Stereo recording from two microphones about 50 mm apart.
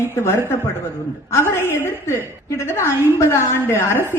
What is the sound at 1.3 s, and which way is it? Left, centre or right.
A woman's voice, left.